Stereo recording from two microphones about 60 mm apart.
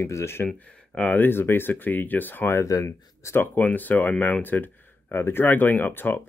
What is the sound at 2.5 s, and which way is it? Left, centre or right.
Speech, left.